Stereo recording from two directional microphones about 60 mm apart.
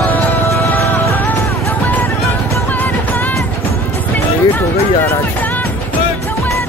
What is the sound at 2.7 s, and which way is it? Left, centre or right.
Music, left.